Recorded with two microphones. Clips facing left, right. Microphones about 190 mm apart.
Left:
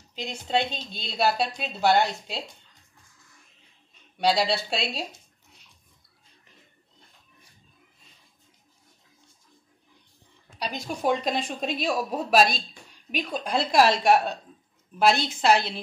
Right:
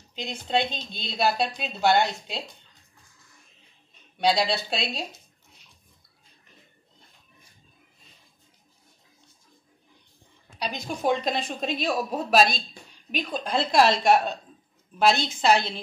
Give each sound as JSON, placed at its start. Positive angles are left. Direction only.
{"t": 0.1, "sound": "speech", "side_deg": 5}
{"t": 4.2, "sound": "speech", "side_deg": 5}
{"t": 10.6, "sound": "a woman's voice", "side_deg": 5}